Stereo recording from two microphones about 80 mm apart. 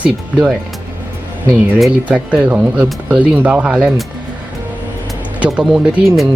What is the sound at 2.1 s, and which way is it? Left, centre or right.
Speech, centre.